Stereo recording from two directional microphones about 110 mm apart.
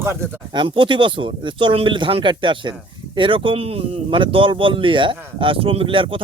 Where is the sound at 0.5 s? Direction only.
50° right (ahead or behind).